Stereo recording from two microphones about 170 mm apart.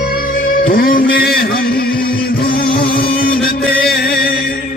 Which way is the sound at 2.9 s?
60° left (ahead or behind).